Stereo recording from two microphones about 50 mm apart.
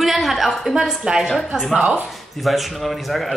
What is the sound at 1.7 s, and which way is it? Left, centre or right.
Speech, right.